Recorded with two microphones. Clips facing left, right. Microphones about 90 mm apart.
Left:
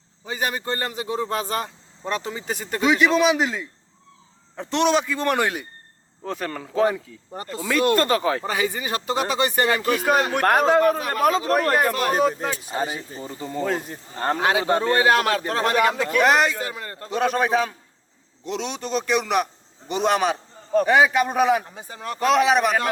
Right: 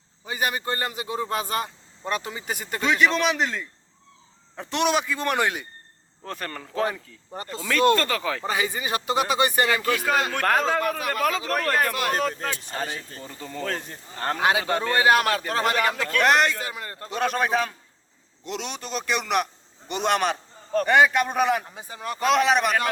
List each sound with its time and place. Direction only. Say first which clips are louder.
0.3 s a man's voice: left 1 dB; 5° right (ahead or behind)
2.8 s a man's voice: left 4 dB; 5° left (ahead or behind)
4.7 s a man's voice: left 3 dB; 10° right (ahead or behind)
6.2 s a man's voice: left 5 dB; 5° left (ahead or behind); by 8.4 s 25° left (ahead or behind)
8.4 s a man's voice: left 1 dB; 20° right (ahead or behind)
9.8 s a man's voice: left 3 dB; 20° left (ahead or behind)
14.9 s a man's voice: right 2 dB; 5° right (ahead or behind)
15.8 s speech: left 3 dB; 10° left (ahead or behind)
16.6 s a man's voice: left 2 dB; 15° right (ahead or behind)
17.1 s a man's voice: left 3 dB; centre (ahead or behind)
21.8 s a man's voice: left 1 dB; 10° right (ahead or behind)
22.2 s a man's voice: left 2 dB; centre (ahead or behind)